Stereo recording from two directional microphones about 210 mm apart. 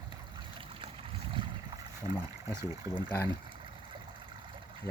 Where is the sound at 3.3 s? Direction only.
25° right (ahead or behind).